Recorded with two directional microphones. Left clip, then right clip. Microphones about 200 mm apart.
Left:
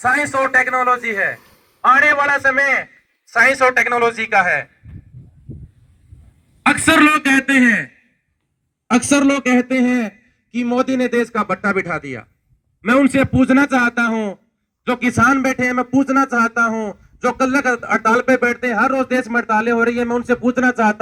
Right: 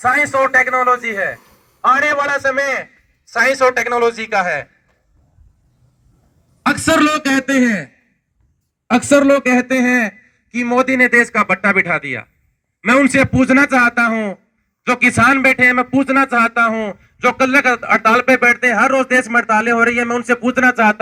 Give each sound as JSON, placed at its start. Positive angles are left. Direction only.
{"t": 0.0, "sound": "a man's voice", "side_deg": -15}
{"t": 1.4, "sound": "a sound", "side_deg": 0}
{"t": 1.8, "sound": "speech", "side_deg": -35}
{"t": 6.8, "sound": "speech", "side_deg": -35}
{"t": 7.2, "sound": "a man's voice", "side_deg": -60}
{"t": 9.5, "sound": "speech", "side_deg": -40}